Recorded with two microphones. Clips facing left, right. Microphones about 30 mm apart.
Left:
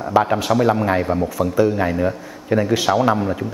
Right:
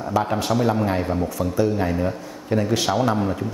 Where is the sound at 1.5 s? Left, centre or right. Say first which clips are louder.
Left 3 dB; left.